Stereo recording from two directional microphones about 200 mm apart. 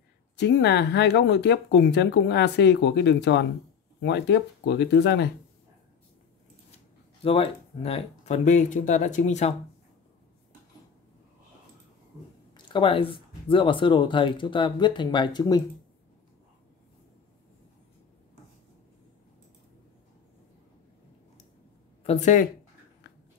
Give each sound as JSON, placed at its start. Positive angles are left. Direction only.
{"t": 0.4, "sound": "speech", "side_deg": 60}
{"t": 7.2, "sound": "speech", "side_deg": 30}
{"t": 12.5, "sound": "speech", "side_deg": 25}
{"t": 22.0, "sound": "speech", "side_deg": 35}